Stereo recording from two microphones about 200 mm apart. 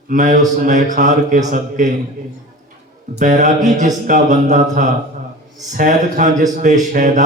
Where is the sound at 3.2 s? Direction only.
35° right (ahead or behind).